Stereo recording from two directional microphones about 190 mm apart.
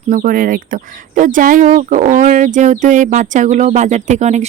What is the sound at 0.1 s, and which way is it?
Speech, 45° right (ahead or behind).